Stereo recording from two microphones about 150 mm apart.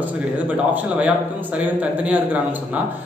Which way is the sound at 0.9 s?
10° right (ahead or behind).